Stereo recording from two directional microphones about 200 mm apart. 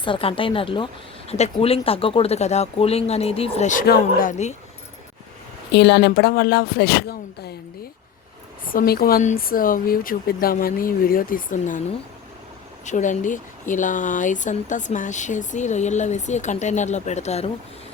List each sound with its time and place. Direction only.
0.0 s speech: 25° left (ahead or behind)
5.7 s speech: 55° left (ahead or behind)
8.6 s speech: 45° left (ahead or behind)
12.8 s speech: 40° left (ahead or behind)